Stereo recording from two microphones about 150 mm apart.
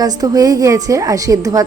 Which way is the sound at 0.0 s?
25° right (ahead or behind).